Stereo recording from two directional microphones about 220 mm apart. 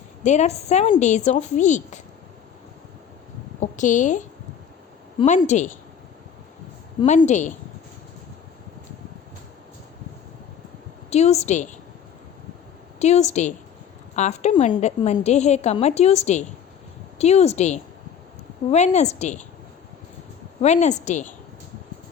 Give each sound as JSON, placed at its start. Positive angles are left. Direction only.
{"t": 0.2, "sound": "a woman's voice", "side_deg": 30}
{"t": 3.6, "sound": "a woman's voice", "side_deg": 35}
{"t": 7.0, "sound": "a woman's voice", "side_deg": 30}
{"t": 11.1, "sound": "a woman's voice", "side_deg": 30}
{"t": 13.0, "sound": "a woman's voice", "side_deg": 30}
{"t": 20.6, "sound": "a woman's voice", "side_deg": 30}